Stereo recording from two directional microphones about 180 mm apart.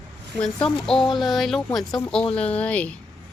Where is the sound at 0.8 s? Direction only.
5° left (ahead or behind).